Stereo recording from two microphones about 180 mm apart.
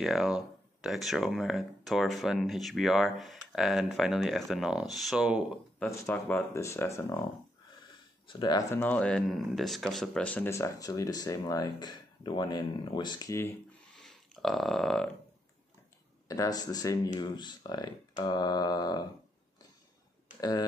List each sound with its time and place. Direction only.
0.0 s speech: centre (ahead or behind)
5.8 s speech: 15° left (ahead or behind)
8.3 s speech: 25° left (ahead or behind)
14.0 s burping: centre (ahead or behind)
16.3 s speech: 20° left (ahead or behind)
20.3 s speech: 20° left (ahead or behind)